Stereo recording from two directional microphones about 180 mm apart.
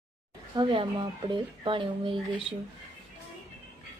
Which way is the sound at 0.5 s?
25° right (ahead or behind).